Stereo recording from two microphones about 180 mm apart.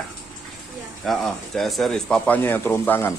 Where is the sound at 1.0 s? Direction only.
Centre (ahead or behind).